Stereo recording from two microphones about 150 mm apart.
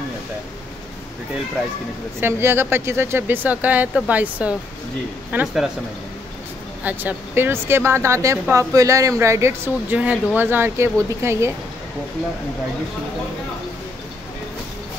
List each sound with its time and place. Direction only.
2.1 s speech: 15° right (ahead or behind)
6.8 s speech: 10° right (ahead or behind)